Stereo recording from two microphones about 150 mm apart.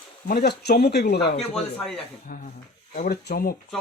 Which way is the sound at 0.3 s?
90° left.